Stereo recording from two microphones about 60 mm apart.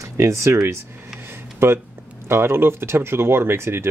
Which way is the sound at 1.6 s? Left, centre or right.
Right.